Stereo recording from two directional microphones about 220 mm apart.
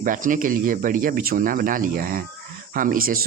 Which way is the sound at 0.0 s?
35° right (ahead or behind).